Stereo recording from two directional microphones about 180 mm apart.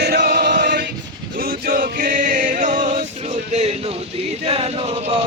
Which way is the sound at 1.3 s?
50° right (ahead or behind).